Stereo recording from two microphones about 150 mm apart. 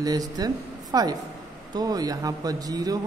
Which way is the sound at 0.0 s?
25° right (ahead or behind).